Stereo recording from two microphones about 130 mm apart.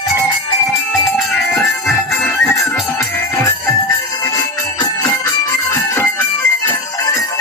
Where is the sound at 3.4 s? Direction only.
25° left (ahead or behind).